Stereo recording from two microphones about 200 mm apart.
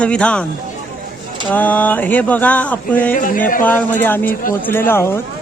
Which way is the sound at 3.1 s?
40° left (ahead or behind).